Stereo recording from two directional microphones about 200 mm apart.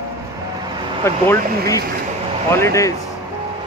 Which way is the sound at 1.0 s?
15° left (ahead or behind).